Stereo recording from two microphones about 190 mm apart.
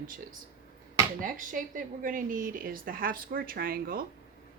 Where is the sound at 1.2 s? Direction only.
45° right (ahead or behind).